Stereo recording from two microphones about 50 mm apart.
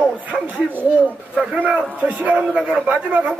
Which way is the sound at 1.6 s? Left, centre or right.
Right.